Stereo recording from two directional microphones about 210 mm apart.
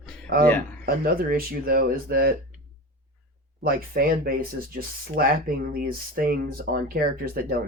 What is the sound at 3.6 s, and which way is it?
Speech, 45° right (ahead or behind).